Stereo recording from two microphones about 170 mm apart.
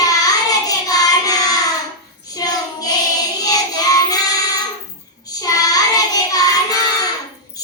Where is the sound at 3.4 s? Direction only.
20° left (ahead or behind).